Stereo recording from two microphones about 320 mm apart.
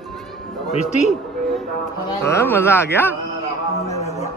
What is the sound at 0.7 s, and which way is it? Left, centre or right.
Speech, centre.